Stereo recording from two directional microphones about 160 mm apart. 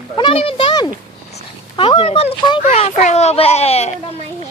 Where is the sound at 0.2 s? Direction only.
35° left (ahead or behind).